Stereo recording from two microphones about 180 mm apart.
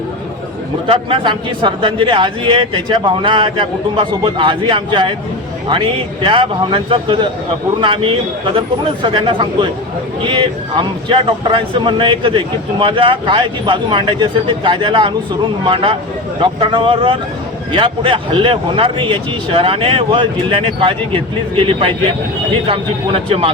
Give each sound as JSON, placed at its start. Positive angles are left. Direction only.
{"t": 0.9, "sound": "speech", "side_deg": -30}